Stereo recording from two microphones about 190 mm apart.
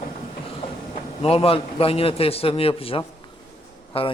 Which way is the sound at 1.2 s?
30° left (ahead or behind).